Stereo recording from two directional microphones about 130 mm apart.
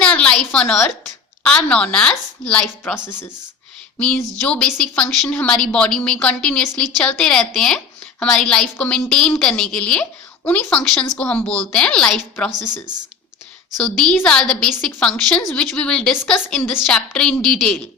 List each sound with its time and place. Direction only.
0.0 s a sound: 10° left (ahead or behind)
1.5 s a woman's voice: 10° left (ahead or behind)
13.8 s a woman's voice: 5° left (ahead or behind)